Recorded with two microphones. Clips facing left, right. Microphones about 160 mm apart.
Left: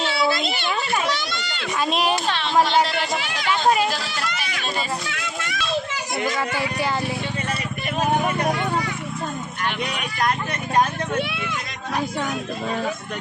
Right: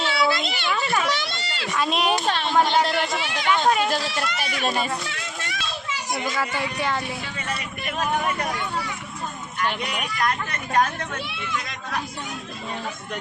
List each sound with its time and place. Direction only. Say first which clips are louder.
0.0 s a sound: left 1 dB; 35° left (ahead or behind)
1.1 s a child's voice: left 1 dB; 30° right (ahead or behind)
1.8 s speech: left 1 dB; centre (ahead or behind)
2.2 s speech: right 1 dB; 45° right (ahead or behind)
3.7 s speech: left 1 dB; 5° left (ahead or behind)
5.0 s a sound: left 3 dB; 30° right (ahead or behind)
6.1 s speech: left 4 dB; centre (ahead or behind)
11.2 s speech: left 7 dB; 65° left (ahead or behind)